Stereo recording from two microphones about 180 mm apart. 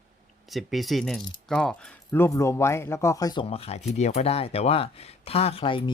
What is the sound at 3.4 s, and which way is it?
Speech, 30° left (ahead or behind).